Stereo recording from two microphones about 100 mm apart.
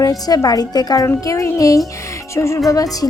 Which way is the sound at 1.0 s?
30° left (ahead or behind).